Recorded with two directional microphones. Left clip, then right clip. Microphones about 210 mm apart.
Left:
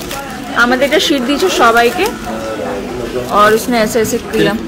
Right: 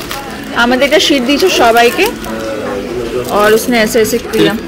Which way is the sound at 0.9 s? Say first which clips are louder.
Right 3 dB; 30° left (ahead or behind).